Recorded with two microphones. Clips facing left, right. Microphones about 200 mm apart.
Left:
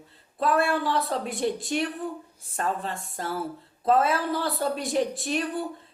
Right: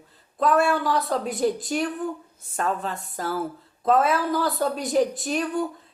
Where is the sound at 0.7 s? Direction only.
30° left (ahead or behind).